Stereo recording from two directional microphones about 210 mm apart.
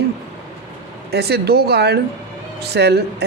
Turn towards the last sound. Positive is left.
turn(degrees=-50)  # may be behind; listen again after turning